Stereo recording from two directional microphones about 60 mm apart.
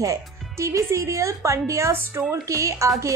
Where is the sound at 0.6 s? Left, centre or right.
Right.